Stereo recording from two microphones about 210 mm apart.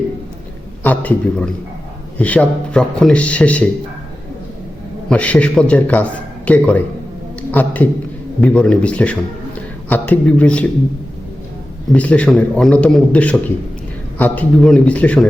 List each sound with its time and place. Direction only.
0.9 s a man's voice: 5° left (ahead or behind)
5.0 s a man's voice: 5° left (ahead or behind)
11.9 s a man's voice: 5° left (ahead or behind)